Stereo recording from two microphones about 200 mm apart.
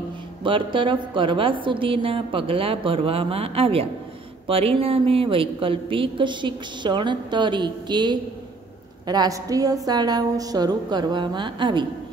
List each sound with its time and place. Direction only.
0.4 s a woman's voice: 25° right (ahead or behind)